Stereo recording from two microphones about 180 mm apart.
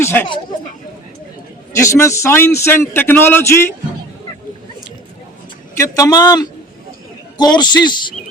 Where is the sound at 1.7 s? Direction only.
15° left (ahead or behind).